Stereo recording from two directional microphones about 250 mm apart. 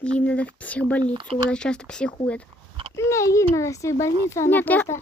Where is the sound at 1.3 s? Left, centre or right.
Centre.